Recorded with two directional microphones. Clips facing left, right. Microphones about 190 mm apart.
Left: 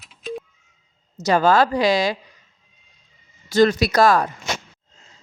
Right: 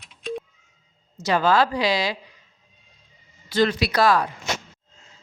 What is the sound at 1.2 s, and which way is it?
Speech, 45° left (ahead or behind).